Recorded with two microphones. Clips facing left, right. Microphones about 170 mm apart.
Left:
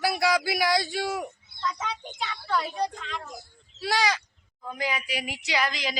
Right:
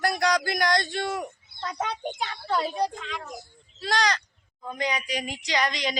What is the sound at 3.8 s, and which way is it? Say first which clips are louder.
Speech: even; 5° left (ahead or behind).